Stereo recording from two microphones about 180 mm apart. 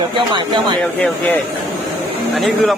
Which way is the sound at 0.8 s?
5° left (ahead or behind).